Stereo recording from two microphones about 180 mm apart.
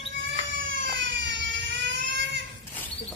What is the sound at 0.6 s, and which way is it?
Vehicle, 90° right.